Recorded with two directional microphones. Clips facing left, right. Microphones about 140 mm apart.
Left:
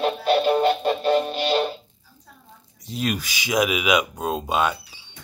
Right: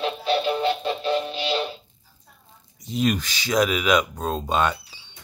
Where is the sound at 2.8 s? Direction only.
Centre (ahead or behind).